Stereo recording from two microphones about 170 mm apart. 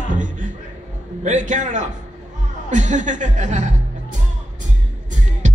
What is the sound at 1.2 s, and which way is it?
Speech, 45° right (ahead or behind).